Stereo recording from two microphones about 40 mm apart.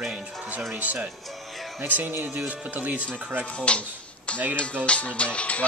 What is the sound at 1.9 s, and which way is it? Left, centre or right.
Speech, right.